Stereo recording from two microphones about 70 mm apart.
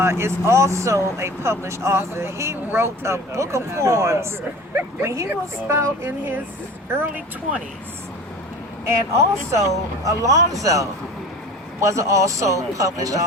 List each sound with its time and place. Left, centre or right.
0.0 s speech: right
8.8 s speech: right